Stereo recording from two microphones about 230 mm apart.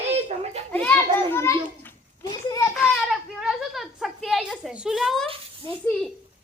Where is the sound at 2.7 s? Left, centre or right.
Centre.